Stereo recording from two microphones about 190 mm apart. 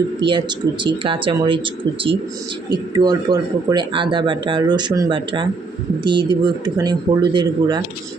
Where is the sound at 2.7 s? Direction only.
20° right (ahead or behind).